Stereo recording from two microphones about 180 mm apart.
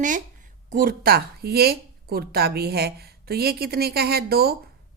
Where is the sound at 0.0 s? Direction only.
45° right (ahead or behind).